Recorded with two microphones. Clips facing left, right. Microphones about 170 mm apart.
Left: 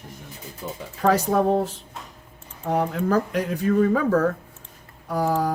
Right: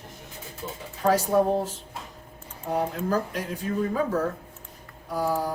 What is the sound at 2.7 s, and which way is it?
Speech, 65° left (ahead or behind).